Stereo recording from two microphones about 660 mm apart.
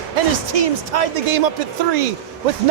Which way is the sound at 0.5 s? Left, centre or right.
Right.